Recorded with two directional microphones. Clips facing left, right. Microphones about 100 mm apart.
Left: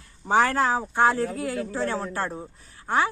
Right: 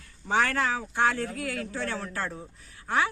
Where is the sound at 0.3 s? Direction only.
30° left (ahead or behind).